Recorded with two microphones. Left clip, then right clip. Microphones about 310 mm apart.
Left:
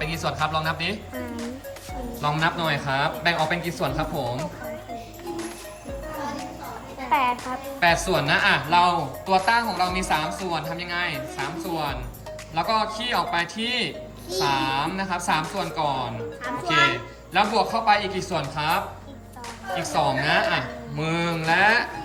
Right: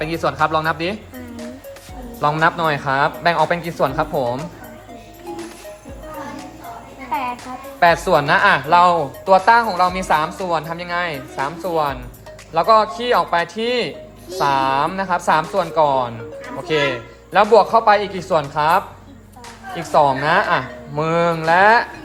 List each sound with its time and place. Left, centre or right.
0.0 s speech: centre
2.2 s speech: centre
7.1 s music: centre
7.8 s speech: centre